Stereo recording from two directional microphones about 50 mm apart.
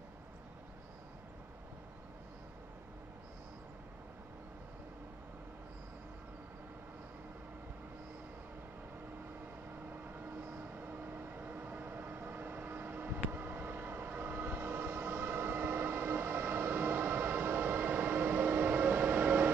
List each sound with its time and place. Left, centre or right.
10.1 s vehicle: right